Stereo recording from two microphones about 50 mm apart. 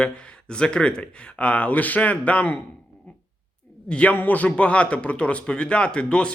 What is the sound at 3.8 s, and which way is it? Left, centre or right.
Speech, left.